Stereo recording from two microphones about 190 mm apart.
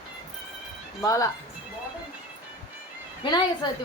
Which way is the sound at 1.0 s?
20° left (ahead or behind).